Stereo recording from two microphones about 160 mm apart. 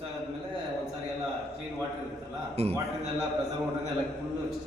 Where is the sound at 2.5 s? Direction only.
40° right (ahead or behind).